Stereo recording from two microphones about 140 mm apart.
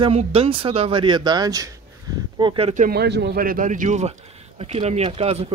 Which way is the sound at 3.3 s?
85° right.